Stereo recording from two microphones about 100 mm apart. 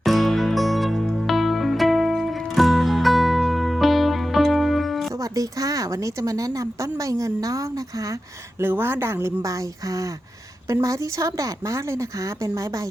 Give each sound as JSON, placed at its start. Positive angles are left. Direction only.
{"t": 0.0, "sound": "music", "side_deg": 0}
{"t": 5.2, "sound": "a woman's voice", "side_deg": -35}
{"t": 8.6, "sound": "a woman's voice", "side_deg": -25}